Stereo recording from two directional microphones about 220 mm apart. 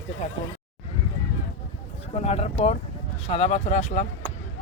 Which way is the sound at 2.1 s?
30° left (ahead or behind).